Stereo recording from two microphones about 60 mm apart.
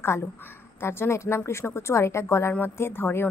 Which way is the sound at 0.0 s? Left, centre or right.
Left.